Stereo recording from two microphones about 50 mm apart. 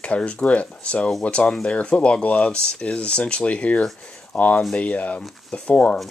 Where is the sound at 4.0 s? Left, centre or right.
Centre.